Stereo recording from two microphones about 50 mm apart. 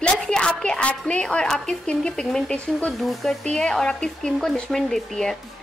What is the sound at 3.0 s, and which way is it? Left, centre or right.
Speech, centre.